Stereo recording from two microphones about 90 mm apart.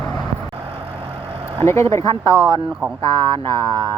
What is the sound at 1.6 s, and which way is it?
Speech, 30° left (ahead or behind).